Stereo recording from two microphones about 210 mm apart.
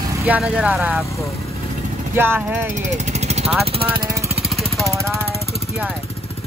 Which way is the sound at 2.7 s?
30° right (ahead or behind).